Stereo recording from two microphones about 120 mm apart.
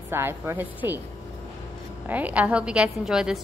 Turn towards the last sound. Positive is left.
turn(degrees=-5)  # may be behind; listen again after turning